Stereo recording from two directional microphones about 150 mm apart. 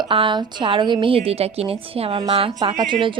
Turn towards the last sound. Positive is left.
turn(degrees=-35)  # may be behind; listen again after turning